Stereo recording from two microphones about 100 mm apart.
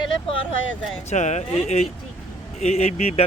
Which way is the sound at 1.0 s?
90° left.